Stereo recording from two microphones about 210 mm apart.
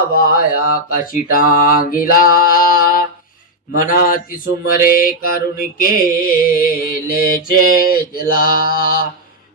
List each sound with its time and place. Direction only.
0.1 s mantra: 45° left (ahead or behind)